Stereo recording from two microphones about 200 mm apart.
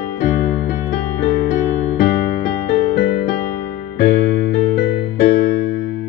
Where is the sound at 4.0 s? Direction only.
50° left (ahead or behind).